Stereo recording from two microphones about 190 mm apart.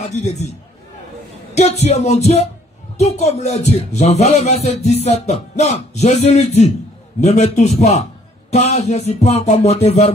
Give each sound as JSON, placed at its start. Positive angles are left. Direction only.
{"t": 0.2, "sound": "speech", "side_deg": 35}
{"t": 1.5, "sound": "speech", "side_deg": 35}